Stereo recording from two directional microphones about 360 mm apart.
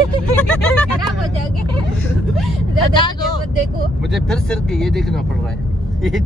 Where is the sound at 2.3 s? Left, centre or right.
Centre.